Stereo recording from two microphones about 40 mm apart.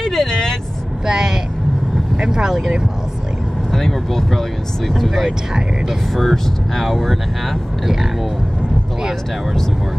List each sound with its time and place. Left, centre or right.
0.0 s vehicle: centre
1.0 s vehicle: centre
2.1 s speech: centre
3.7 s speech: centre